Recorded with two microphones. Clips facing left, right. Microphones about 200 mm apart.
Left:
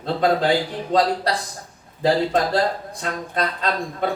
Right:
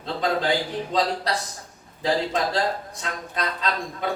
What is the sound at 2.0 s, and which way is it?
A man's voice, 55° left (ahead or behind).